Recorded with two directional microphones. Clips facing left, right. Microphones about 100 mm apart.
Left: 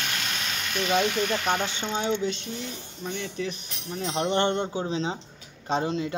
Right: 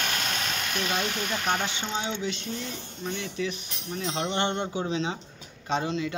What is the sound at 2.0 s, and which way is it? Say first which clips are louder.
Mechanisms: left 5 dB; 45° left (ahead or behind).